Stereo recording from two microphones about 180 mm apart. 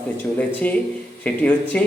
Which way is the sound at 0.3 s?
10° left (ahead or behind).